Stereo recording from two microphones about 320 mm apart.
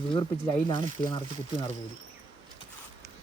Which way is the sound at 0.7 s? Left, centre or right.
Centre.